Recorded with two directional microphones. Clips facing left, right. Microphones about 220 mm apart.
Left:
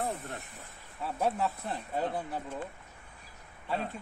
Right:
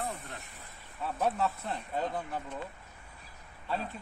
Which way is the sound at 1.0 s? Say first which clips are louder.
Even; 10° left (ahead or behind).